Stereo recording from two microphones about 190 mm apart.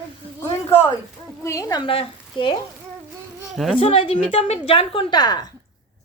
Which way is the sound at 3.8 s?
30° left (ahead or behind).